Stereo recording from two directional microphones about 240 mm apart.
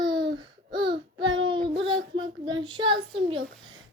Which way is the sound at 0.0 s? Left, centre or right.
Centre.